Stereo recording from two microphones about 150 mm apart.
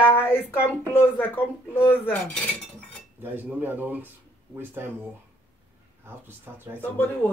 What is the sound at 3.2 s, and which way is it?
Speech, 15° right (ahead or behind).